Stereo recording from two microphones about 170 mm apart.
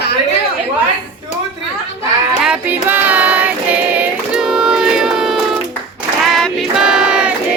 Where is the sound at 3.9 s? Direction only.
5° right (ahead or behind).